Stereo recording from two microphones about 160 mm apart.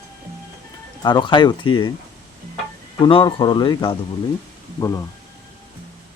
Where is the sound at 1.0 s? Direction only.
30° left (ahead or behind).